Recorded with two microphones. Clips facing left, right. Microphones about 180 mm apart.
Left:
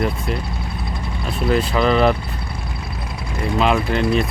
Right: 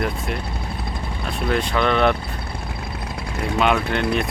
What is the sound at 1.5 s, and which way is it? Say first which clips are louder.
Speech: left 3 dB; 5° left (ahead or behind).